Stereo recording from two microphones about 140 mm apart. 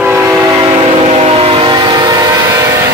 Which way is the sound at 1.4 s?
40° right (ahead or behind).